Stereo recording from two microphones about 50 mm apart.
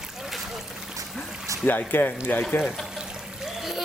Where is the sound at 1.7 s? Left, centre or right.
Left.